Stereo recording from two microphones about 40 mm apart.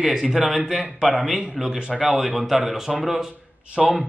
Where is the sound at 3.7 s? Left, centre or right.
Right.